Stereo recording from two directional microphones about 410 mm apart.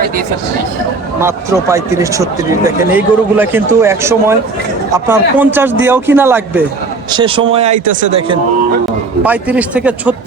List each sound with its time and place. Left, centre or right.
1.2 s speech: centre
9.2 s speech: centre